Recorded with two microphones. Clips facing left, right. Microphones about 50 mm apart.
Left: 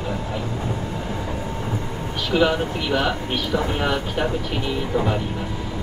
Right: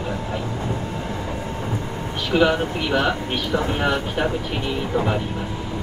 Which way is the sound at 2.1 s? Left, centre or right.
Right.